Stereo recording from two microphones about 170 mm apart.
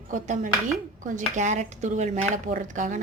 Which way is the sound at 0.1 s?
50° right (ahead or behind).